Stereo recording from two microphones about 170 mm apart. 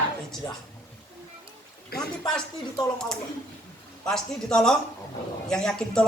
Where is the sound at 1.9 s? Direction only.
65° left (ahead or behind).